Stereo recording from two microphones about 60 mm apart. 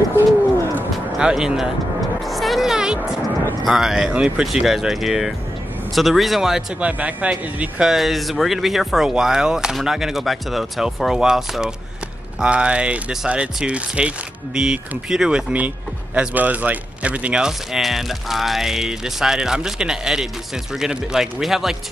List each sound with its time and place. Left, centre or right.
1.1 s speech: centre
2.2 s music: centre
3.6 s speech: centre
6.8 s speech: right
7.8 s speech: centre
12.4 s speech: centre
16.2 s speech: right; by 21.7 s centre